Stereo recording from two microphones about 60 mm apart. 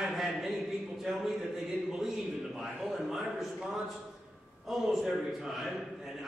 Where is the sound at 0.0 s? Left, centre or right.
Centre.